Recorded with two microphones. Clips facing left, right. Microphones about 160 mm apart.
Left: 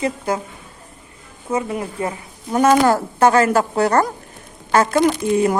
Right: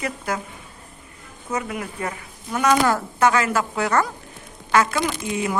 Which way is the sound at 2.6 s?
40° left (ahead or behind).